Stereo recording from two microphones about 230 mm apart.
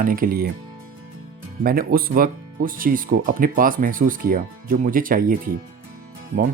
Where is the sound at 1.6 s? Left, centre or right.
Right.